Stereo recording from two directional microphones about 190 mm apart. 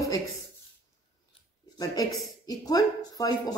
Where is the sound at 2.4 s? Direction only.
20° left (ahead or behind).